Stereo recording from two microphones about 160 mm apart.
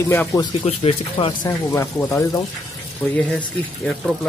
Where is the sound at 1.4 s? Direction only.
15° left (ahead or behind).